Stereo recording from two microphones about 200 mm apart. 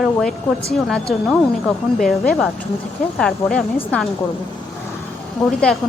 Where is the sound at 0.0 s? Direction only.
Centre (ahead or behind).